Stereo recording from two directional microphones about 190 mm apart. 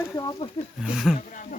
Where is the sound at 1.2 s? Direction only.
45° left (ahead or behind).